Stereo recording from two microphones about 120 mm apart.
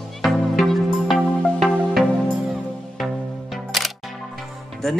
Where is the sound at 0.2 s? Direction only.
Centre (ahead or behind).